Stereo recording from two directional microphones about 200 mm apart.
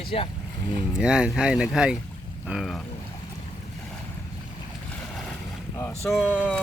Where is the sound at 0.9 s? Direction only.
5° right (ahead or behind).